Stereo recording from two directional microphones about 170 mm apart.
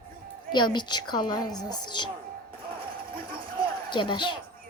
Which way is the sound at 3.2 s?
55° right (ahead or behind).